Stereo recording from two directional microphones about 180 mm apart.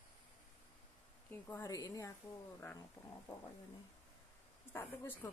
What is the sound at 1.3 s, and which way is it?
Speech, 20° left (ahead or behind).